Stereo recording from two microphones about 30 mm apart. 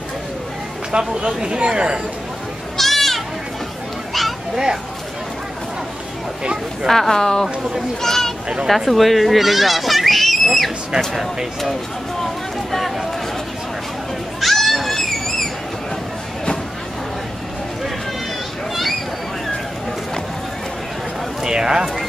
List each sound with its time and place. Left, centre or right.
0.9 s speech: right
2.8 s goat: centre
6.4 s speech: right
6.9 s speech: centre
8.6 s speech: centre
12.7 s a sound: centre
14.4 s a sound: centre
21.5 s speech: right